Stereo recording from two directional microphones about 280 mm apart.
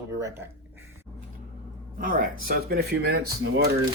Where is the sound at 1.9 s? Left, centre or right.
Right.